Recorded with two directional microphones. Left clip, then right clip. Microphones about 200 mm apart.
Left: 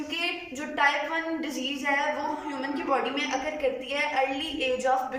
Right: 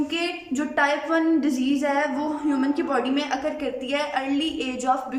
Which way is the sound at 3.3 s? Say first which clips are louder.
Right 1 dB; 60° right (ahead or behind).